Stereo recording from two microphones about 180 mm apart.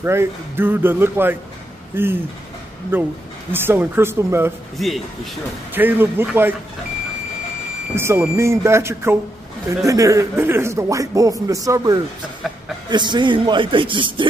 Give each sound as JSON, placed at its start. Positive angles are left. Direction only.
{"t": 0.0, "sound": "speech", "side_deg": -15}
{"t": 4.7, "sound": "a man's voice", "side_deg": 0}
{"t": 5.8, "sound": "speech", "side_deg": -10}
{"t": 7.9, "sound": "speech", "side_deg": -15}